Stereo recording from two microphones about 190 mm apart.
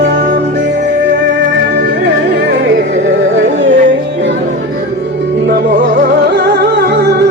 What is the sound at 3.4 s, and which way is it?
Music, 75° right (ahead or behind).